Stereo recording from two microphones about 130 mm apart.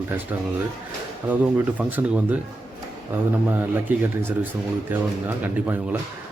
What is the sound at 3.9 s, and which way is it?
A man's voice, 15° right (ahead or behind).